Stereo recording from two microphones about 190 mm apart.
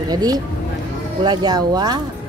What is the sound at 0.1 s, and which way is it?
A woman's voice, 20° right (ahead or behind).